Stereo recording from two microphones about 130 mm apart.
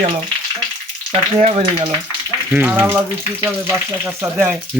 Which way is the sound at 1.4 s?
55° right (ahead or behind).